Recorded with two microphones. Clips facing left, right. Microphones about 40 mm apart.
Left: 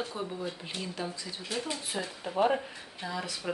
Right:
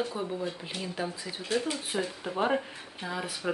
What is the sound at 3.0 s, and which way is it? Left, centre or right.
Speech, right.